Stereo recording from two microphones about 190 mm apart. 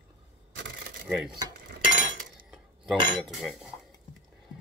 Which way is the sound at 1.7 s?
45° right (ahead or behind).